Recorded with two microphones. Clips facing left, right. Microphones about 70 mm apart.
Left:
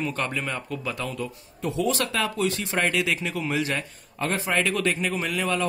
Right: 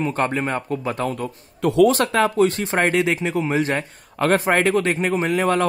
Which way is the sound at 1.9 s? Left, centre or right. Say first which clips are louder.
Right 7 dB; right.